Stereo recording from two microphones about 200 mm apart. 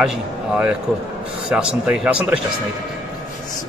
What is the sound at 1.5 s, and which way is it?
Speech, 5° right (ahead or behind).